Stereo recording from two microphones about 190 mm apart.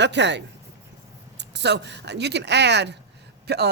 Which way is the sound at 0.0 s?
65° right (ahead or behind).